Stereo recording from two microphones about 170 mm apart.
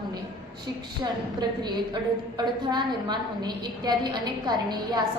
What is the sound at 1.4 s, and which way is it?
A woman's voice, 25° right (ahead or behind).